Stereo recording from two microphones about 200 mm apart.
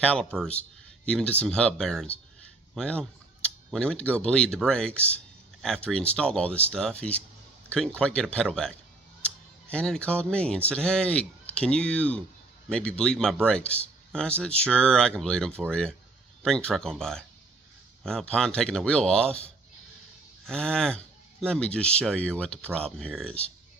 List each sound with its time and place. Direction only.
0.0 s a man's voice: 5° left (ahead or behind)